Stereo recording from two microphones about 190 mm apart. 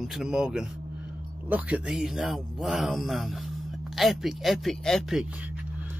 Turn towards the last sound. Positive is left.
turn(degrees=-5)  # may be behind; listen again after turning